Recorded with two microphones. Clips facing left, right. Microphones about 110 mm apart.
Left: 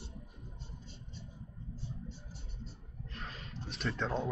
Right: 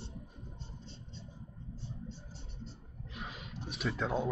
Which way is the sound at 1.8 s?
25° right (ahead or behind).